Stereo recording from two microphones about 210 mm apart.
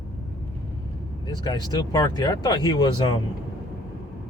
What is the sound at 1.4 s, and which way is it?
Speech, 20° left (ahead or behind).